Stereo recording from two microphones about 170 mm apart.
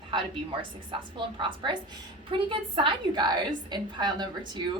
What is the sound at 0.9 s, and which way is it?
Speech, 30° right (ahead or behind).